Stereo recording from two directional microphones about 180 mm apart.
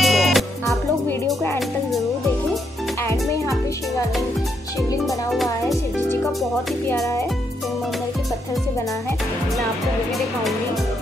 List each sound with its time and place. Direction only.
0.0 s music: centre (ahead or behind)
1.2 s music: 10° left (ahead or behind)
3.1 s music: 15° left (ahead or behind)
5.0 s music: centre (ahead or behind)